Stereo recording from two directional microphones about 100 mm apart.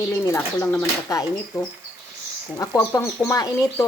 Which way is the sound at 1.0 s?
35° left (ahead or behind).